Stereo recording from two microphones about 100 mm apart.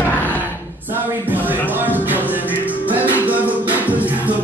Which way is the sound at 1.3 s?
20° right (ahead or behind).